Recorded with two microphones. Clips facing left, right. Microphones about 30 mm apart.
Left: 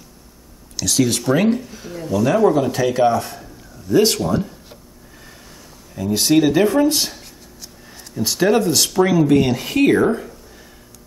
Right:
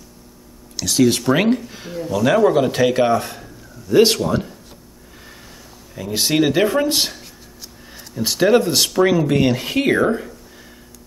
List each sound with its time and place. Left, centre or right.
0.7 s speech: centre
1.3 s speech: right
2.0 s speech: centre
2.2 s speech: right
5.2 s a sound: centre
6.9 s speech: right
7.2 s a sound: centre
8.2 s speech: centre